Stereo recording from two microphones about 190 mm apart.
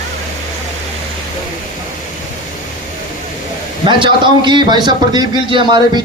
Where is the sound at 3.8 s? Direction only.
25° right (ahead or behind).